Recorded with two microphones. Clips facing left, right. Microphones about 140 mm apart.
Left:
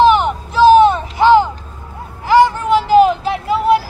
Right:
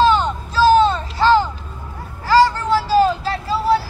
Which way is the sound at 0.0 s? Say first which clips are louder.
Left 4 dB; 20° left (ahead or behind).